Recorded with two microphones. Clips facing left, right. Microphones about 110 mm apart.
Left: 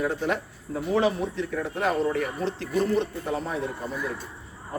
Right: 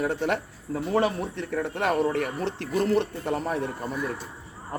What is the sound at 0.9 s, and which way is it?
Speech, 55° right (ahead or behind).